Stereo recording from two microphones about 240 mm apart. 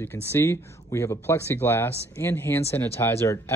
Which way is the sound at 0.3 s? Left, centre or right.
Centre.